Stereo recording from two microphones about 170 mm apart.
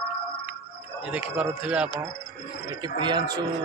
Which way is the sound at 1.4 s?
5° right (ahead or behind).